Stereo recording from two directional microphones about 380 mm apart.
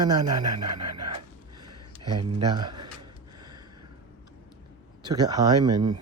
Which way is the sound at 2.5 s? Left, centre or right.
Centre.